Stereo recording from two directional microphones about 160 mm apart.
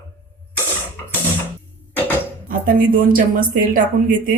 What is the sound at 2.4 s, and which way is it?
Speech, 60° right (ahead or behind).